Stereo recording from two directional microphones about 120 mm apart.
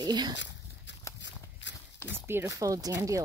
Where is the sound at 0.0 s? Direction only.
35° right (ahead or behind).